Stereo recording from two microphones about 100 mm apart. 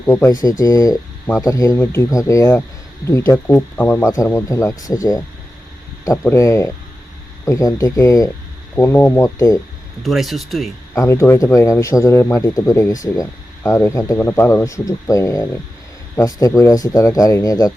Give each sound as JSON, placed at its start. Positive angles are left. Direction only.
{"t": 0.0, "sound": "speech", "side_deg": 30}
{"t": 1.7, "sound": "speech", "side_deg": 25}
{"t": 3.4, "sound": "speech", "side_deg": 20}
{"t": 4.0, "sound": "speech", "side_deg": 35}
{"t": 6.3, "sound": "speech", "side_deg": 30}
{"t": 8.8, "sound": "speech", "side_deg": 25}
{"t": 10.0, "sound": "speech", "side_deg": 0}
{"t": 10.9, "sound": "speech", "side_deg": 30}
{"t": 13.6, "sound": "speech", "side_deg": 25}